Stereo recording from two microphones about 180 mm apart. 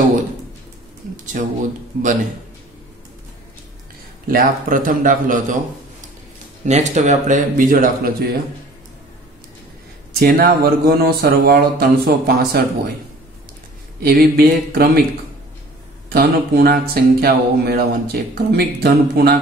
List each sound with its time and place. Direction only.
1.1 s a sound: 45° right (ahead or behind)
4.3 s a man's voice: 50° right (ahead or behind)
10.1 s speech: 55° right (ahead or behind)
13.9 s speech: 60° right (ahead or behind)
16.1 s speech: 60° right (ahead or behind)